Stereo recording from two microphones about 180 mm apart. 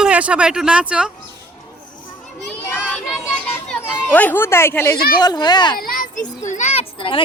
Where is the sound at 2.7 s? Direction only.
10° left (ahead or behind).